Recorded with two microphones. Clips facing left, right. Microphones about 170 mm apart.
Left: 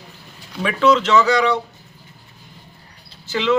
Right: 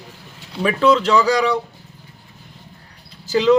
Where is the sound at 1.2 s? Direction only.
10° right (ahead or behind).